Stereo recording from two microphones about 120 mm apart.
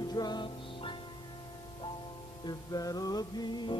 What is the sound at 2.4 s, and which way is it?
Music, 30° left (ahead or behind).